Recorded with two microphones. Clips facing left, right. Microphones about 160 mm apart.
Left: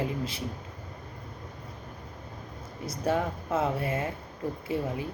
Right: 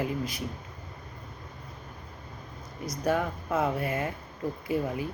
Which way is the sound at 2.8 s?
25° left (ahead or behind).